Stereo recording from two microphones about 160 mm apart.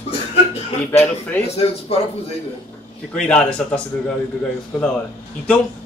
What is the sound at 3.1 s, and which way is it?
Speech, 5° left (ahead or behind).